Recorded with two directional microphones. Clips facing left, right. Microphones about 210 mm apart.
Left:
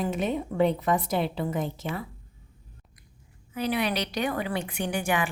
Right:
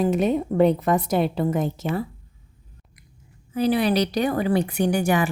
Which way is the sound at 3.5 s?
35° right (ahead or behind).